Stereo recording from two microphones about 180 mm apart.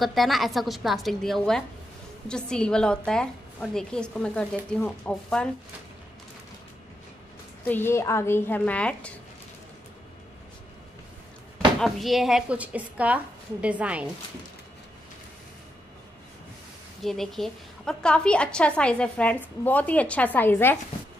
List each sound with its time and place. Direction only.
0.0 s a woman's voice: centre (ahead or behind)
7.6 s a woman's voice: 10° left (ahead or behind)
11.5 s speech: centre (ahead or behind)
17.0 s a woman's voice: centre (ahead or behind)